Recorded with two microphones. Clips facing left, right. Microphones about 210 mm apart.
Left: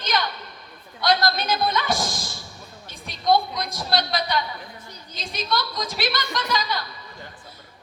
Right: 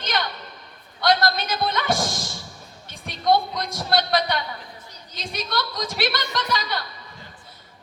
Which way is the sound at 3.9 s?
55° right (ahead or behind).